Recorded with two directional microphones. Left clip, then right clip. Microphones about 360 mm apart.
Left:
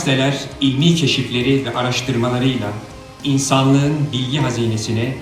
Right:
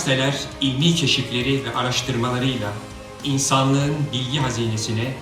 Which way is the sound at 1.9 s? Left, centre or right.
Centre.